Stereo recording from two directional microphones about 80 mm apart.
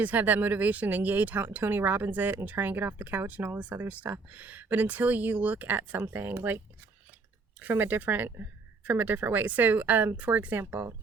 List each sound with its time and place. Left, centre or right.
0.0 s speech: right
7.6 s speech: right